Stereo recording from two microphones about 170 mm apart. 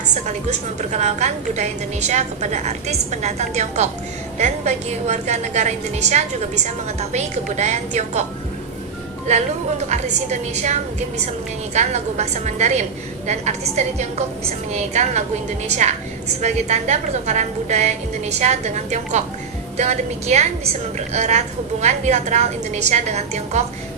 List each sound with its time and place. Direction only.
0.1 s a woman's voice: 45° right (ahead or behind)
9.2 s a woman's voice: 40° right (ahead or behind)